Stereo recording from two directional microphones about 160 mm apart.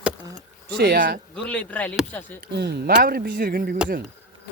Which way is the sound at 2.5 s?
90° right.